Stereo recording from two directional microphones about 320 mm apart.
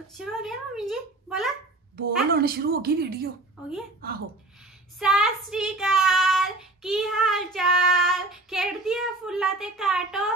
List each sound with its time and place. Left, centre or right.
0.2 s child singing: centre
2.3 s speech: right
4.9 s child singing: centre